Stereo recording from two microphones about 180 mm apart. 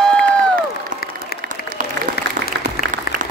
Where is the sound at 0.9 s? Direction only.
50° right (ahead or behind).